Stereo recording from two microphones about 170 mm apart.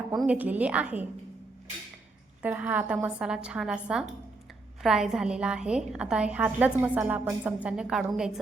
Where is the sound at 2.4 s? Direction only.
10° right (ahead or behind).